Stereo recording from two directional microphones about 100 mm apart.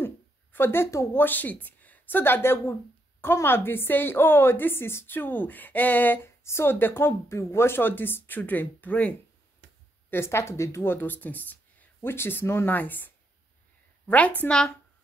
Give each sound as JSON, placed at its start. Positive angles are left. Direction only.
{"t": 0.0, "sound": "a woman's voice", "side_deg": 20}